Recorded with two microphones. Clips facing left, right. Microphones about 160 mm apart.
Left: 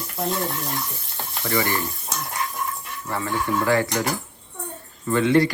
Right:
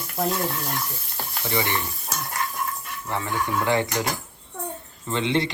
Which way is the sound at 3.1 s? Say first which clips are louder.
Left 2 dB; 15° right (ahead or behind).